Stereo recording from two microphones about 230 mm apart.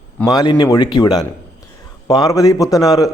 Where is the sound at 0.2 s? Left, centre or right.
Centre.